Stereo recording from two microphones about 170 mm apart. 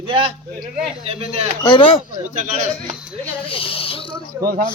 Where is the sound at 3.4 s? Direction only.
30° left (ahead or behind).